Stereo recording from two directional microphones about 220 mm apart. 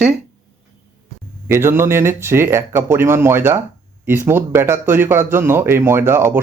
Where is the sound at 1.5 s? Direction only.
10° right (ahead or behind).